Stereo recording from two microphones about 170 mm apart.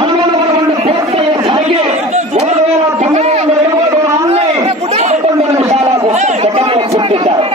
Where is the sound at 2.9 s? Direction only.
40° right (ahead or behind).